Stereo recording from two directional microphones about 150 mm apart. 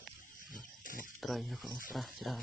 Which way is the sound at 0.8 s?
65° left (ahead or behind).